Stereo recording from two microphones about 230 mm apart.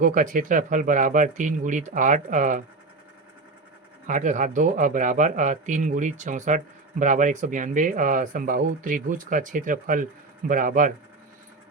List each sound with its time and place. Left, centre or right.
0.0 s speech: right
4.0 s speech: right